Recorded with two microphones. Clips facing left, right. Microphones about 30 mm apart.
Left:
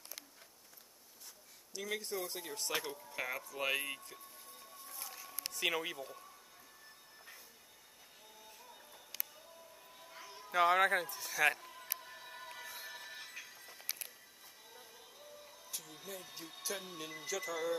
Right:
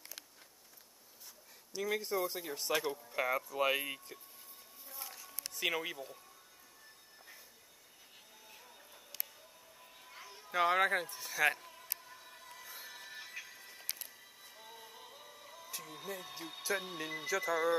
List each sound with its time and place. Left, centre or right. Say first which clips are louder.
1.7 s speech: right 5 dB; centre
4.8 s a sound: right 1 dB; centre
5.5 s speech: even; centre
10.0 s speech: left 1 dB; centre
12.0 s music: left 4 dB; left
12.6 s music: left 2 dB; centre
14.6 s music: right 5 dB; right
15.8 s speech: right 7 dB; centre